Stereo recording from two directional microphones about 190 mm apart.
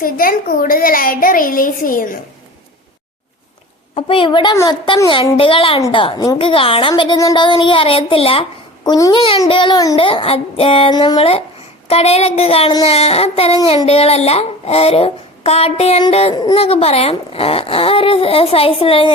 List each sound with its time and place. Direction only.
0.0 s a woman's voice: 50° left (ahead or behind)
3.9 s a woman's voice: 30° left (ahead or behind)
11.9 s child singing: 35° left (ahead or behind)